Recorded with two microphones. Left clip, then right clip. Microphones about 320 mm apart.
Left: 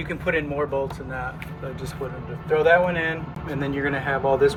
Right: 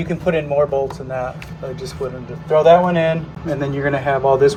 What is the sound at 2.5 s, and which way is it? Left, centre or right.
Speech, centre.